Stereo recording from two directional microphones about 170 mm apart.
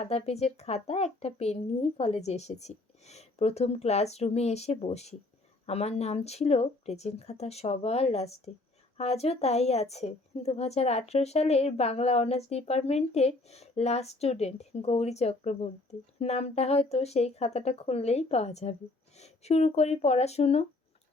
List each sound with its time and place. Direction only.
0.0 s a woman's voice: 40° left (ahead or behind)